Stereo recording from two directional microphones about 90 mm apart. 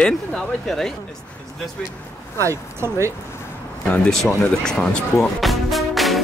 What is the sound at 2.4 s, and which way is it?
Speech, 35° right (ahead or behind).